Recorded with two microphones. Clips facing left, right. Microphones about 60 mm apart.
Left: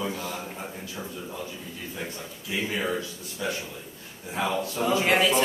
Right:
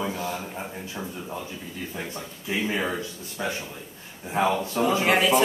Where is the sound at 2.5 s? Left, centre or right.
Right.